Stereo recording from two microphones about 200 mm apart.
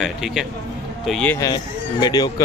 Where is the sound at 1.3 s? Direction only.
20° left (ahead or behind).